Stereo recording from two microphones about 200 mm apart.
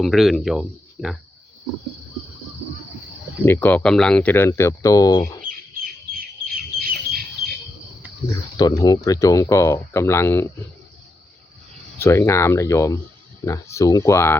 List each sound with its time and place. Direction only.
0.0 s speech: centre (ahead or behind)
3.4 s speech: 10° left (ahead or behind)
5.5 s bird: 45° right (ahead or behind)
8.5 s speech: 20° left (ahead or behind)
11.9 s speech: 15° left (ahead or behind)